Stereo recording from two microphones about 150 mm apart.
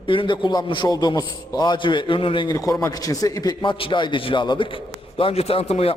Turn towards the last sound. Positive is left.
turn(degrees=45)  # may be behind; listen again after turning